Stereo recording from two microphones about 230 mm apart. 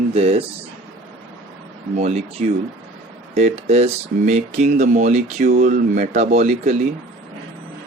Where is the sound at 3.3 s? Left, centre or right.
Right.